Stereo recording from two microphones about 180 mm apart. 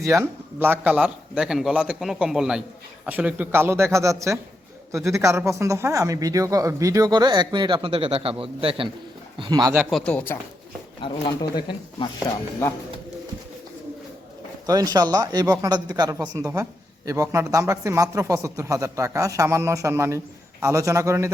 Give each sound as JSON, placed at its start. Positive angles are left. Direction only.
{"t": 0.0, "sound": "a man's voice", "side_deg": -15}
{"t": 10.1, "sound": "speech", "side_deg": 10}
{"t": 11.0, "sound": "speech", "side_deg": 25}
{"t": 12.6, "sound": "speech", "side_deg": 15}
{"t": 14.7, "sound": "speech", "side_deg": -20}